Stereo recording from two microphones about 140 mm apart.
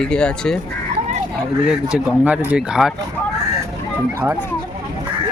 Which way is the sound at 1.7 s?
5° right (ahead or behind).